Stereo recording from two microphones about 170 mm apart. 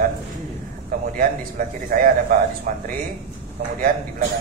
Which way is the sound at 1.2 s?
55° right (ahead or behind).